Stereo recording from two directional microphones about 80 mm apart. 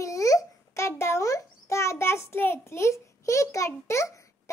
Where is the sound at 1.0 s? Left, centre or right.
Left.